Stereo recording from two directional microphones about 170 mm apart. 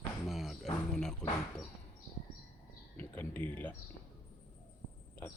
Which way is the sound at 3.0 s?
10° left (ahead or behind).